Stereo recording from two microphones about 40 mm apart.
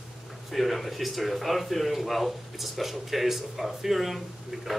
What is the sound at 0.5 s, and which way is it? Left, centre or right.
Speech, centre.